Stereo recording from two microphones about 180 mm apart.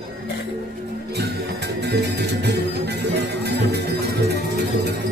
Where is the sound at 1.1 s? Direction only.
65° right (ahead or behind).